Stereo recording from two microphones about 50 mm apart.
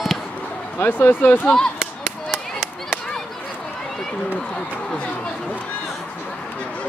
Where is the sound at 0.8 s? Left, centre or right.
Left.